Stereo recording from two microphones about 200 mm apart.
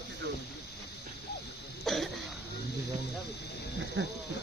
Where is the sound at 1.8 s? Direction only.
Centre (ahead or behind).